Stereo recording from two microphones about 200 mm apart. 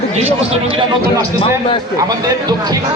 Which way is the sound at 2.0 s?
20° right (ahead or behind).